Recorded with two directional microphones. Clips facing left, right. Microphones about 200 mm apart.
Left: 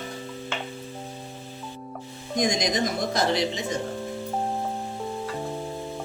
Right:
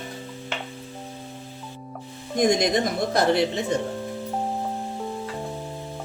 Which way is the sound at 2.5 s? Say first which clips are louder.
Right 5 dB; 60° right (ahead or behind).